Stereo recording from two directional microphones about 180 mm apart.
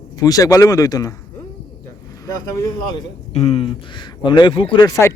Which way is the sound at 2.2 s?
20° left (ahead or behind).